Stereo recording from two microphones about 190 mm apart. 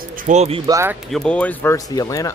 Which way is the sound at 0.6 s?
15° right (ahead or behind).